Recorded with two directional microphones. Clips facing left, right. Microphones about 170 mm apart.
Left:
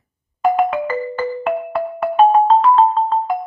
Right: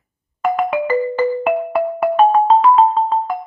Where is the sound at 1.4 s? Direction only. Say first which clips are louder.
Right 3 dB; 10° right (ahead or behind).